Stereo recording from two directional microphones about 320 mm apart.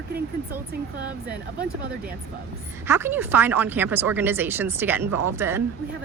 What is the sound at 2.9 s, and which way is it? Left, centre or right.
A woman's voice, centre.